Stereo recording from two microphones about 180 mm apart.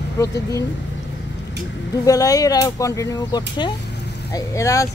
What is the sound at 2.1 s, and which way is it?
Speech, 20° left (ahead or behind).